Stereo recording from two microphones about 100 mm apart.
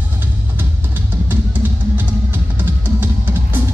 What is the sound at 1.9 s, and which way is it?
Music, 20° right (ahead or behind).